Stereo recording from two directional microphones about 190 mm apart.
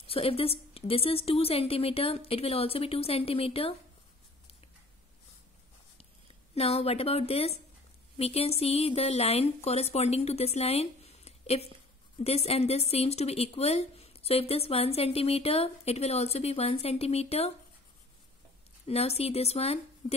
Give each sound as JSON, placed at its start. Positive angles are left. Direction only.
{"t": 0.0, "sound": "a woman's voice", "side_deg": 30}
{"t": 6.5, "sound": "a woman's voice", "side_deg": 30}
{"t": 18.9, "sound": "a woman's voice", "side_deg": 35}